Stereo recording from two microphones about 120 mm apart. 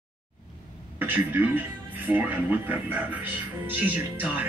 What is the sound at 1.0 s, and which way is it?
A man's voice, 15° right (ahead or behind).